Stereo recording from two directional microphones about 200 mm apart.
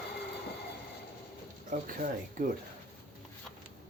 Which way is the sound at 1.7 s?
35° right (ahead or behind).